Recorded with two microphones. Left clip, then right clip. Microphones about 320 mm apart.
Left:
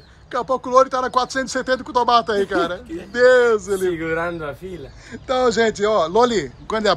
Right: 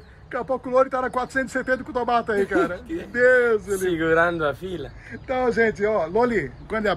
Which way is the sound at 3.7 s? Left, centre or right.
Left.